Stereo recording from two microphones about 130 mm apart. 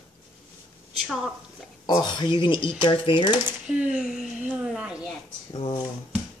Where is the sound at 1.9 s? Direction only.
35° left (ahead or behind).